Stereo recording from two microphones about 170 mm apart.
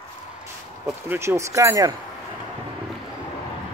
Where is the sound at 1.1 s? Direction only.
15° right (ahead or behind).